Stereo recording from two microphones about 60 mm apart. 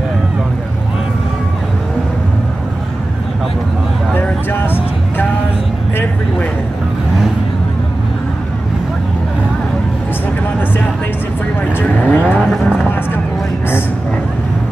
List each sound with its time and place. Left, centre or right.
4.1 s vehicle: left
11.8 s vehicle: left
12.4 s vehicle: centre